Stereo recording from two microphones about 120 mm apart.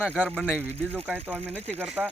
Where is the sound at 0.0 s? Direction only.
10° right (ahead or behind).